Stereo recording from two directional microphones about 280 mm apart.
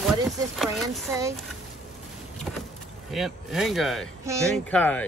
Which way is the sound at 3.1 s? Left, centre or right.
Centre.